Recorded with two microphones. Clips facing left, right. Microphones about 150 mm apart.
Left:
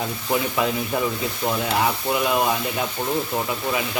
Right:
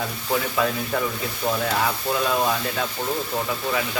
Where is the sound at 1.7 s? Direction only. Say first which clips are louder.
Left 2 dB; 15° left (ahead or behind).